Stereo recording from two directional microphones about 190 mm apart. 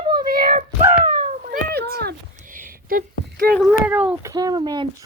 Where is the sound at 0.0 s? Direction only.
25° right (ahead or behind).